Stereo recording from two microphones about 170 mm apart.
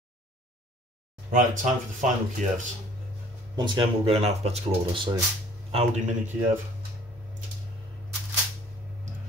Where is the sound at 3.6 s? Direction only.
30° right (ahead or behind).